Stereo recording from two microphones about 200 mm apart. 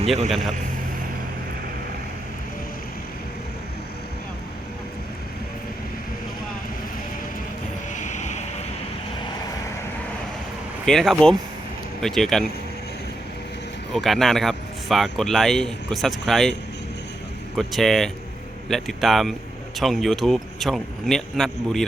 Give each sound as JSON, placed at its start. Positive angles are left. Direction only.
{"t": 0.3, "sound": "speech", "side_deg": 0}
{"t": 7.9, "sound": "vehicle", "side_deg": 35}
{"t": 10.8, "sound": "speech", "side_deg": 0}
{"t": 13.9, "sound": "speech", "side_deg": 0}
{"t": 17.6, "sound": "speech", "side_deg": 0}